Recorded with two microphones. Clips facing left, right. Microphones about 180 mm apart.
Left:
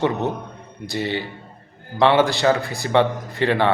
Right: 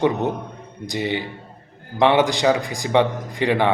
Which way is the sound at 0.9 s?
15° right (ahead or behind).